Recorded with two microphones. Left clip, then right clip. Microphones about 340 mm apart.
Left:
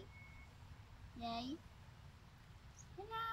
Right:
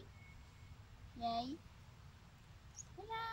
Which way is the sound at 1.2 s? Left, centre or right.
Centre.